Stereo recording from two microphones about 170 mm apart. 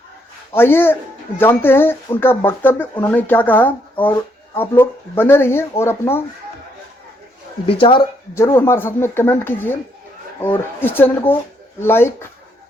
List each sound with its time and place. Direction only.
0.5 s speech: 15° left (ahead or behind)
7.7 s speech: 30° left (ahead or behind)
8.4 s speech: 15° left (ahead or behind)